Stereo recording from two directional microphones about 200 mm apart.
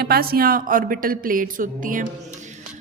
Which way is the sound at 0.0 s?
50° right (ahead or behind).